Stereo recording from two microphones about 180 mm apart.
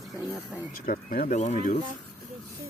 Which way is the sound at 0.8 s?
55° left (ahead or behind).